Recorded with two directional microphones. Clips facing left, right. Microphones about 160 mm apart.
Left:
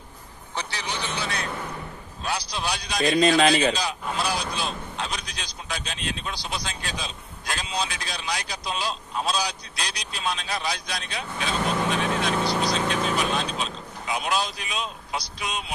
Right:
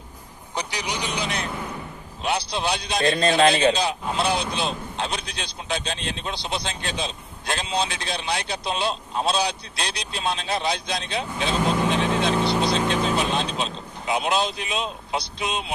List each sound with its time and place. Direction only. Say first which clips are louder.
0.6 s a man's voice: right 3 dB; 15° right (ahead or behind)